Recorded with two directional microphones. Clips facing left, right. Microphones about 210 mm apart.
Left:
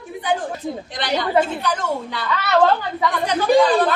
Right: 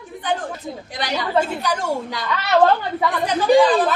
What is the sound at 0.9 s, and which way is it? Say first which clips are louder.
A woman's voice: left 1 dB; 10° right (ahead or behind).